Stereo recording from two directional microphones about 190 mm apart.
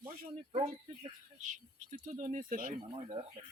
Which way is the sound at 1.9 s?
45° right (ahead or behind).